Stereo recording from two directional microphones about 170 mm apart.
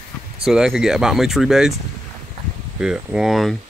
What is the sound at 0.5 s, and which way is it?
Speech, 5° right (ahead or behind).